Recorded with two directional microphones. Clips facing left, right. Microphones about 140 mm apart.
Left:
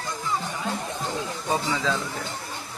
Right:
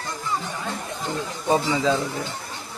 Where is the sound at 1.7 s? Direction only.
15° right (ahead or behind).